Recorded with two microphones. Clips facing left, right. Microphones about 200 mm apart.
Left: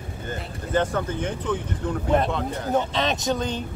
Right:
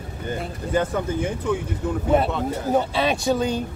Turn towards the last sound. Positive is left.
turn(degrees=-10)  # may be behind; listen again after turning